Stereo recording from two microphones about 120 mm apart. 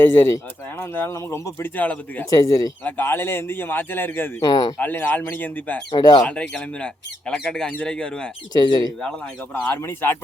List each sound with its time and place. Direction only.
0.0 s speech: 20° left (ahead or behind)
2.3 s speech: 30° left (ahead or behind)
2.8 s speech: 15° left (ahead or behind)
4.4 s speech: 30° left (ahead or behind)
4.8 s speech: 15° left (ahead or behind)
5.9 s speech: 35° left (ahead or behind)
6.2 s speech: 10° left (ahead or behind)
8.5 s speech: 35° left (ahead or behind)
9.7 s speech: 20° left (ahead or behind)